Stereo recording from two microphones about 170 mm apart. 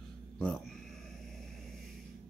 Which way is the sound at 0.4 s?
10° left (ahead or behind).